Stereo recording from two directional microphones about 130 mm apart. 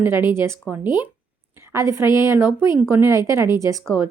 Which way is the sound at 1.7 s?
25° right (ahead or behind).